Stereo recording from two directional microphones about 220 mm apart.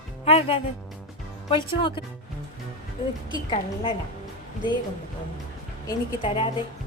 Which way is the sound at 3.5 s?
20° left (ahead or behind).